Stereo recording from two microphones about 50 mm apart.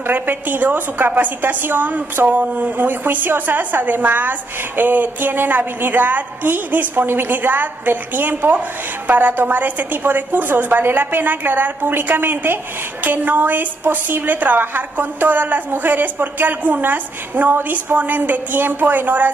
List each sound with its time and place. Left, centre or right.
0.0 s a woman's voice: right
17.6 s speech: right
17.9 s a woman's voice: right